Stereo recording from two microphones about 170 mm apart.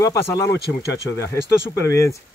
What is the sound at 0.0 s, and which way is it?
Speech, 20° left (ahead or behind).